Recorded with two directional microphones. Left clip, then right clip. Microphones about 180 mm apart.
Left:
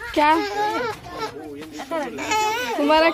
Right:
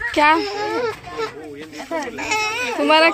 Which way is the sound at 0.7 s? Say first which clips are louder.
Right 2 dB; 20° left (ahead or behind).